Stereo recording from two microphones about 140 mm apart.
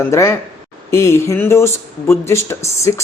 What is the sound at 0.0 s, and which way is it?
Speech, 20° left (ahead or behind).